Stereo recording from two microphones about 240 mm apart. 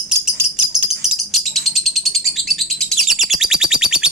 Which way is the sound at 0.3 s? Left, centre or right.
Centre.